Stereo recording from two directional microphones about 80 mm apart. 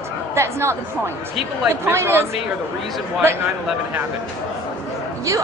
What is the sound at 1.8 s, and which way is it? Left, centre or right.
Speech, right.